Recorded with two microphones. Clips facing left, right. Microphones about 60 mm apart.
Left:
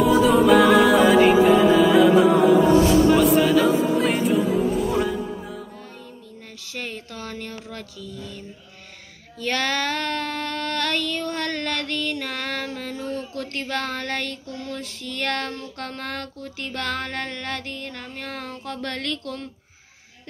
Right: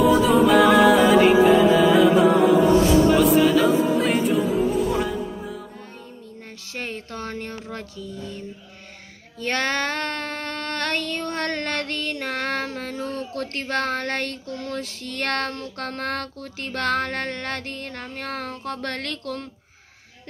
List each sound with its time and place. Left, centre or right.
0.0 s music: centre
6.7 s speech: right
9.4 s child singing: right